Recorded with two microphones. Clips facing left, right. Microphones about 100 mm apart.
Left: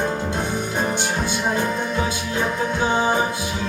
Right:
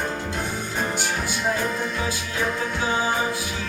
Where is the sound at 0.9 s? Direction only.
25° left (ahead or behind).